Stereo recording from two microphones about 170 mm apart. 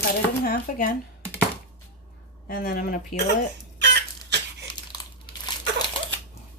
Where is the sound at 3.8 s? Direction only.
85° right.